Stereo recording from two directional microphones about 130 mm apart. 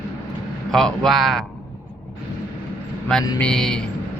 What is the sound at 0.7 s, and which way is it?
Speech, 5° left (ahead or behind).